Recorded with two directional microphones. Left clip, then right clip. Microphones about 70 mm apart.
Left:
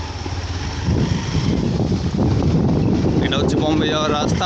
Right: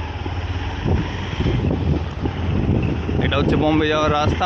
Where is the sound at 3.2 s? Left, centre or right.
Centre.